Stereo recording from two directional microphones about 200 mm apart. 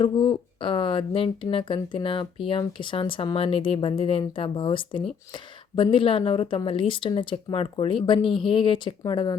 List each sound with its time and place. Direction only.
0.0 s speech: 25° left (ahead or behind)